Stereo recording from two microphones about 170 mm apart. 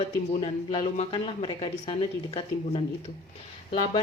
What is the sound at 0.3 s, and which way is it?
Speech, 35° left (ahead or behind).